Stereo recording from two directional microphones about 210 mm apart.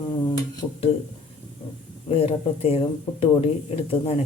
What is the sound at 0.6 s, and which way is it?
Speech, 10° left (ahead or behind).